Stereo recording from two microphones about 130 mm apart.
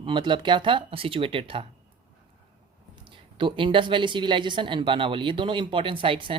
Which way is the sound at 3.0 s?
40° right (ahead or behind).